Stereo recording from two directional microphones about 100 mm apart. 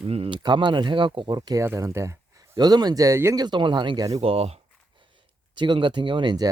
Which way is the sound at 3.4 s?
50° right (ahead or behind).